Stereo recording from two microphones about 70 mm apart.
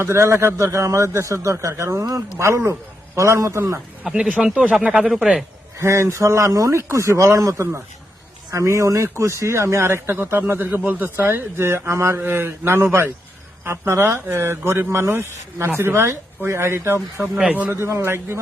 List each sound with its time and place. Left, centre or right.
0.0 s a man's voice: right
4.2 s speech: centre
5.8 s a man's voice: right
17.2 s speech: centre
17.8 s a man's voice: right